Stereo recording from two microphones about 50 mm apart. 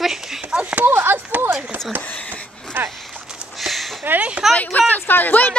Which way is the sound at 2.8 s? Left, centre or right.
Right.